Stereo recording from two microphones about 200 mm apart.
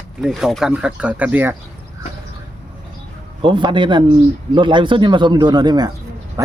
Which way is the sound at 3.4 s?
25° right (ahead or behind).